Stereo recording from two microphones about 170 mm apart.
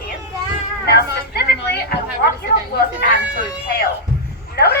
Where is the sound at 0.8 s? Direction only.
70° left (ahead or behind).